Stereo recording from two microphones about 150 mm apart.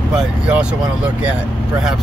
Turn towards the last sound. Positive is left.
turn(degrees=-5)  # may be behind; listen again after turning